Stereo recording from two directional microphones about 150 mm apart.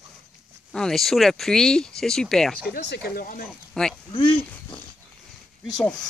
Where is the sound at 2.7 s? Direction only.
85° left; by 3.5 s 70° left (ahead or behind).